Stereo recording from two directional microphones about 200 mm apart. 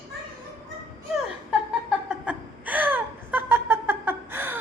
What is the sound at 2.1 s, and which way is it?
Chuckle, 5° right (ahead or behind).